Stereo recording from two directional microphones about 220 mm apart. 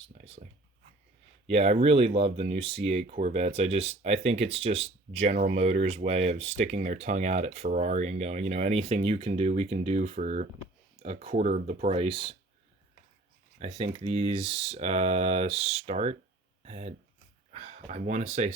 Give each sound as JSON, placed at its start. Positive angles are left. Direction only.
{"t": 0.1, "sound": "speech", "side_deg": -35}
{"t": 1.5, "sound": "speech", "side_deg": -25}
{"t": 13.6, "sound": "speech", "side_deg": -30}